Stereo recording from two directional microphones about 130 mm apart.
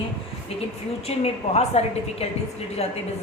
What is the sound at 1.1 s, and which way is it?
A woman's voice, 50° left (ahead or behind).